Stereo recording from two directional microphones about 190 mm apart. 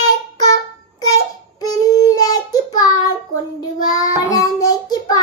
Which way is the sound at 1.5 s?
20° left (ahead or behind).